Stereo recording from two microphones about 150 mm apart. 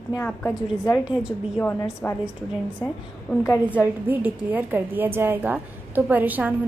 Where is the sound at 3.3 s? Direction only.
Centre (ahead or behind).